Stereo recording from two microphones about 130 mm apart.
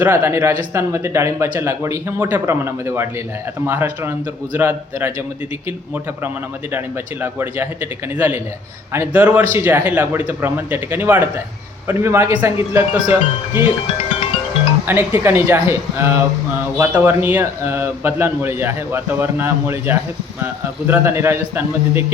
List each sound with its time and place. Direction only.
0.0 s a man's voice: 20° right (ahead or behind)
6.7 s a man's voice: 15° right (ahead or behind)
14.8 s a man's voice: 15° right (ahead or behind)